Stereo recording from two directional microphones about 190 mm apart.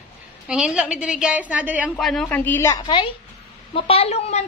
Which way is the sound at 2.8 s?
25° left (ahead or behind).